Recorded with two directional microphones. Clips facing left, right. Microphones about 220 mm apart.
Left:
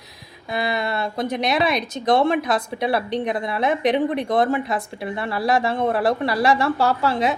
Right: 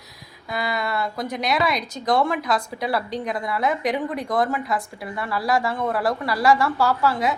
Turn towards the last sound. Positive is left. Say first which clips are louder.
# left 1 dB
turn(degrees=25)  # may be behind; listen again after turning